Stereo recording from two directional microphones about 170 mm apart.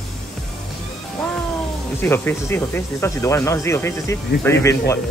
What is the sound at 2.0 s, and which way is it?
Speech, 10° left (ahead or behind).